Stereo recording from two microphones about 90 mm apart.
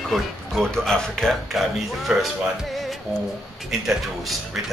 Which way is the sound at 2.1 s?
5° right (ahead or behind).